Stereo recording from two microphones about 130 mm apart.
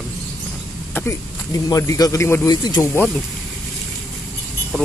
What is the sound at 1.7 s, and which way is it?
Speech, 25° left (ahead or behind).